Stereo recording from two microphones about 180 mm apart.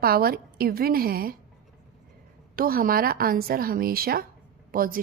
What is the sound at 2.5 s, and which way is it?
A woman's voice, 55° right (ahead or behind).